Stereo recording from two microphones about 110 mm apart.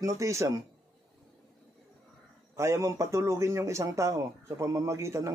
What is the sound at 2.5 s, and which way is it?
A man's voice, 25° right (ahead or behind).